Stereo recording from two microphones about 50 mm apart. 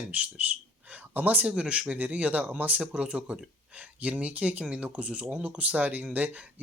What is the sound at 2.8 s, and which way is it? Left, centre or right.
Speech, centre.